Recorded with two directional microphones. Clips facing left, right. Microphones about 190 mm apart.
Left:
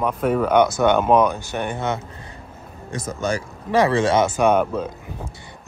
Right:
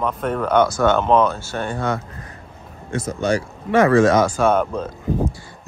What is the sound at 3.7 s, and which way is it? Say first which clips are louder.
Speech: right 4 dB; 25° left (ahead or behind).